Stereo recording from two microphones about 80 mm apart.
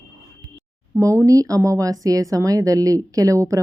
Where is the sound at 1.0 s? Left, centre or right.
Right.